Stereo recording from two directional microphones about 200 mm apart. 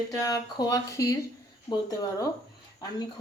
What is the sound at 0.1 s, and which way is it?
Speech, 15° left (ahead or behind).